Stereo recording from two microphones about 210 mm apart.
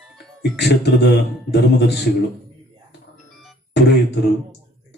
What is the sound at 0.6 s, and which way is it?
Speech, 55° left (ahead or behind).